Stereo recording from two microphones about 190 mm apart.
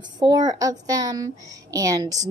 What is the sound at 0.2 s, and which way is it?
A child's voice, 20° right (ahead or behind).